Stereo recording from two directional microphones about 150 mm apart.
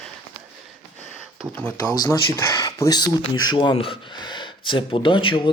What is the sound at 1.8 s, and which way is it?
Speech, 25° left (ahead or behind).